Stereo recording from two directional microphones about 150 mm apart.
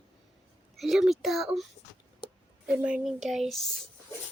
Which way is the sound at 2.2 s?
35° left (ahead or behind).